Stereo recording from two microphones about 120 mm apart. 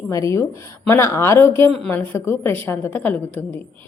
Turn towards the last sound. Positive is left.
turn(degrees=15)  # may be behind; listen again after turning